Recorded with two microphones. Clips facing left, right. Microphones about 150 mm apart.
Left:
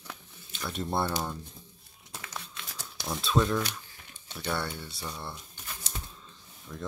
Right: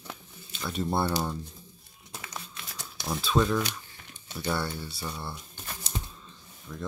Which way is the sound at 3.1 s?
Centre (ahead or behind).